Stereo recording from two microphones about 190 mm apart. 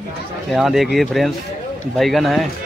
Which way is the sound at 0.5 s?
Centre (ahead or behind).